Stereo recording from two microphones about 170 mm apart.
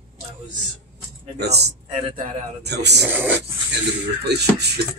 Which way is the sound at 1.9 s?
35° right (ahead or behind).